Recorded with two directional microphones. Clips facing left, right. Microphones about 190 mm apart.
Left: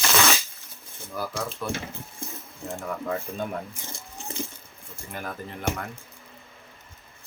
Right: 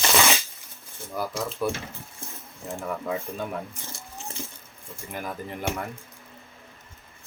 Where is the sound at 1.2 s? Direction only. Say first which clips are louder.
Right 2 dB; 15° right (ahead or behind).